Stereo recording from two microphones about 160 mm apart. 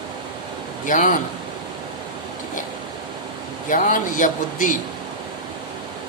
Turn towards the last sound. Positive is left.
turn(degrees=55)  # may be behind; listen again after turning